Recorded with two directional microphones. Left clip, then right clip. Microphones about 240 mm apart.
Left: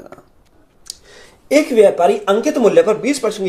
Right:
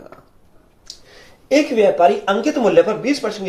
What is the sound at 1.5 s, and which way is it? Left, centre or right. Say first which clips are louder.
Speech: left 3 dB; left.